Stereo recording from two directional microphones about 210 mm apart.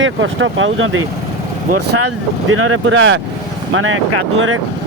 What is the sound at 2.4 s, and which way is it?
Speech, 80° right.